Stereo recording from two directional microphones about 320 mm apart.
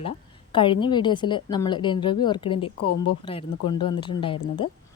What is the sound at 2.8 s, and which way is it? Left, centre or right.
Speech, left.